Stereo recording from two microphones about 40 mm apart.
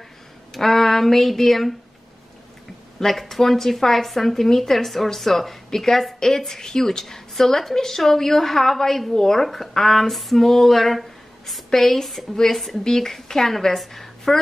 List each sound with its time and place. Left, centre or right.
0.5 s speech: centre
3.0 s a woman's voice: centre